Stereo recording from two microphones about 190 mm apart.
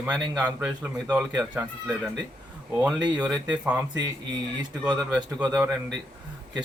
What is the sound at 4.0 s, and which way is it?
Mantra, 20° right (ahead or behind).